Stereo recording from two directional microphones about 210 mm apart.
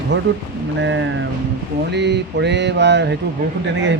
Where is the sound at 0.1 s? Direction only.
60° right (ahead or behind).